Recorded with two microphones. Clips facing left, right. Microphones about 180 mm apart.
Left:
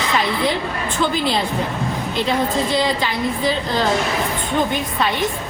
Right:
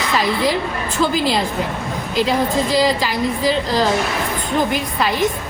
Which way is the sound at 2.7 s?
Centre (ahead or behind).